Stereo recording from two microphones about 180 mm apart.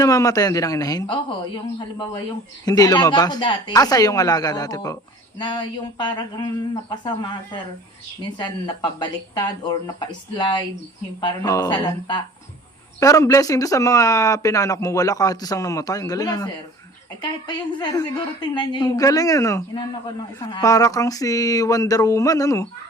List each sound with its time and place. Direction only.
0.0 s speech: 20° left (ahead or behind)
2.6 s speech: 20° left (ahead or behind)